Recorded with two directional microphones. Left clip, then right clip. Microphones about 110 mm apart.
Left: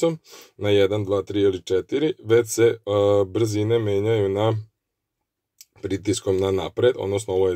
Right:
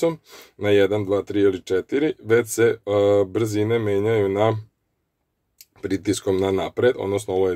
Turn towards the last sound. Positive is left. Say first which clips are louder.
# even
turn(degrees=5)  # may be behind; listen again after turning